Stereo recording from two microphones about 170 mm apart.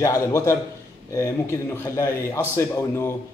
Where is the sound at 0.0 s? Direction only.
20° left (ahead or behind).